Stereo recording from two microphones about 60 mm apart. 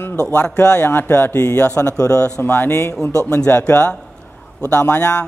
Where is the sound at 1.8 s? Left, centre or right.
Left.